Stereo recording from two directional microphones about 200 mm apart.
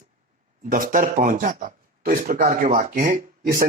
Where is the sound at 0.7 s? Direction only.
40° right (ahead or behind).